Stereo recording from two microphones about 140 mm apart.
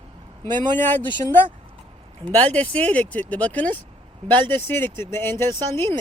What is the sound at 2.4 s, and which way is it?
Speech, 10° left (ahead or behind).